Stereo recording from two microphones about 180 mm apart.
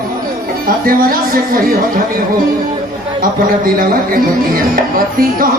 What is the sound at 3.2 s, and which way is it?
Speech, 50° right (ahead or behind).